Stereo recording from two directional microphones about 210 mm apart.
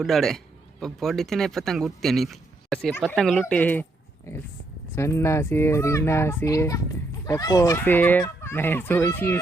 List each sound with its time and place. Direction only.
0.0 s speech: centre (ahead or behind)
4.9 s speech: 15° left (ahead or behind)